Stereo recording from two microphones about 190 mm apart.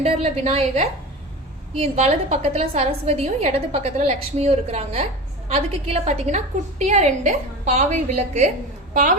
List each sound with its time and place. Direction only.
0.0 s a woman's voice: 35° right (ahead or behind)